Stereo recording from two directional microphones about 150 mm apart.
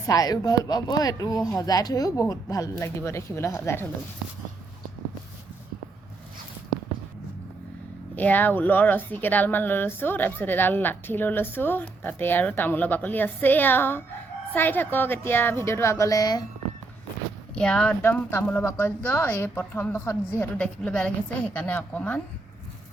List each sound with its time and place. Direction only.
0.0 s speech: 25° left (ahead or behind)
8.1 s speech: 10° left (ahead or behind)
17.5 s speech: 5° left (ahead or behind)